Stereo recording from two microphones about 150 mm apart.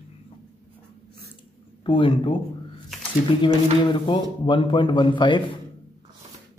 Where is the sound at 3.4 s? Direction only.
30° left (ahead or behind).